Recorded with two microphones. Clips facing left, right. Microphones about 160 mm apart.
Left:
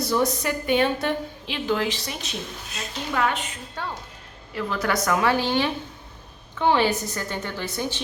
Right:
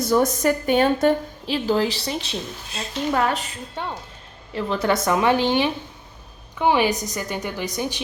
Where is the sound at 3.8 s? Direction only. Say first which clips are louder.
Right 2 dB; 20° right (ahead or behind).